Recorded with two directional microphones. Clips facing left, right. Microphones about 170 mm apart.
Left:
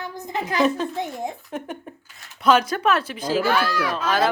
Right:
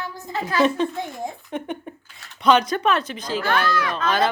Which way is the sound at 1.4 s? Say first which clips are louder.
Right 2 dB; centre (ahead or behind).